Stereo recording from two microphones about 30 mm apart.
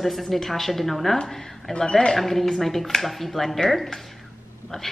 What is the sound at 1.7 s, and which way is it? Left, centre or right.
Speech, left.